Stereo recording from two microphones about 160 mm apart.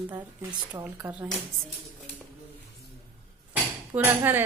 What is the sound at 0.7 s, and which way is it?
Speech, 15° right (ahead or behind).